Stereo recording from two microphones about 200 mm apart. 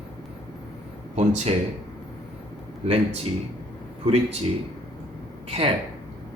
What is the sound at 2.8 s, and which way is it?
Speech, 30° right (ahead or behind).